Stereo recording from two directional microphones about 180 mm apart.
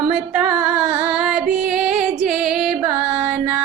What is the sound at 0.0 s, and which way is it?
Music, 5° right (ahead or behind).